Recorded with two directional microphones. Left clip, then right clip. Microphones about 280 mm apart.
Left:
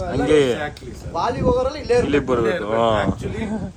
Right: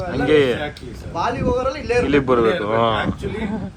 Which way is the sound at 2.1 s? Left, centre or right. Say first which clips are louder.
Right 3 dB; centre.